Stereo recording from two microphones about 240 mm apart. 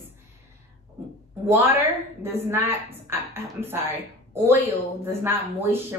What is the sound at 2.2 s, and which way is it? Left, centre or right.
Speech, centre.